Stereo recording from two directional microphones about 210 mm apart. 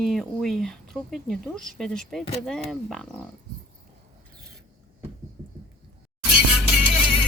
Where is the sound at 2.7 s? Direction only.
Centre (ahead or behind).